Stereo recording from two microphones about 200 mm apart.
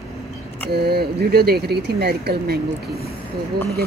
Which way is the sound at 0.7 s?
55° right (ahead or behind).